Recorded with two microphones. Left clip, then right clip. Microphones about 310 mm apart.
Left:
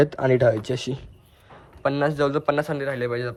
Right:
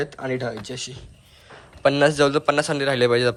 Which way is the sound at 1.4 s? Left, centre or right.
Centre.